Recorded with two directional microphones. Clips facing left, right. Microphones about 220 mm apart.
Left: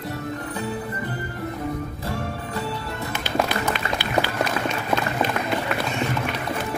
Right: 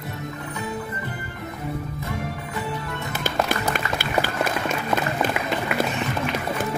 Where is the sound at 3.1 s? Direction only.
50° right (ahead or behind).